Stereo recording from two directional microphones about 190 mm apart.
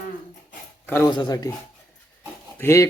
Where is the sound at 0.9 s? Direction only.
15° left (ahead or behind).